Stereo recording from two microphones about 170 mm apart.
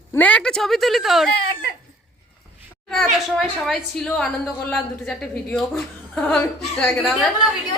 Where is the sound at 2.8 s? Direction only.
Centre (ahead or behind).